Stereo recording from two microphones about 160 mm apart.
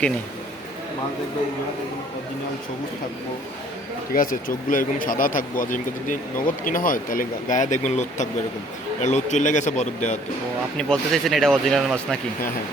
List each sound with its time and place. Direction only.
4.1 s a man's voice: 60° left (ahead or behind)
10.8 s speech: centre (ahead or behind)